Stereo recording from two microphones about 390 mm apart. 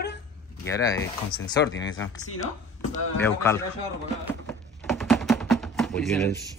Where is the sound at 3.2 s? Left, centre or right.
Centre.